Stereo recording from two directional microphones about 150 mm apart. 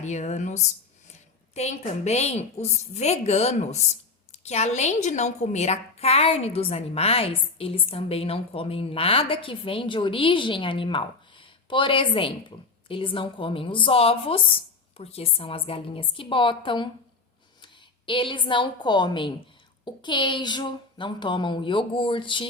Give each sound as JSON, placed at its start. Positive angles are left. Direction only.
{"t": 0.0, "sound": "a woman's voice", "side_deg": 50}